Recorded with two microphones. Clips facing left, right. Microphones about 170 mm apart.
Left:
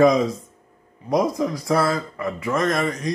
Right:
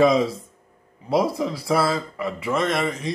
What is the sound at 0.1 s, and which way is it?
Speech, 30° right (ahead or behind).